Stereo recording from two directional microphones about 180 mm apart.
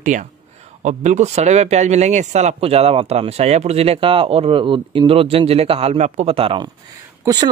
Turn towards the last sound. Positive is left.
turn(degrees=-25)  # may be behind; listen again after turning